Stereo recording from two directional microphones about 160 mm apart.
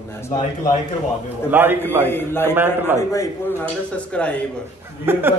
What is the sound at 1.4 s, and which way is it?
Speech, 10° right (ahead or behind).